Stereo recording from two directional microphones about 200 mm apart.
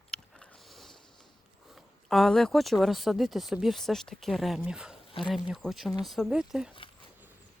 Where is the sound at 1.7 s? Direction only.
Centre (ahead or behind).